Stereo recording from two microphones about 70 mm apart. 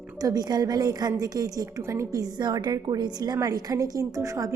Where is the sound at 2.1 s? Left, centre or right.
Right.